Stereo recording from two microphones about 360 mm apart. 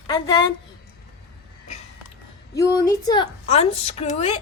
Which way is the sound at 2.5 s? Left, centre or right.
Centre.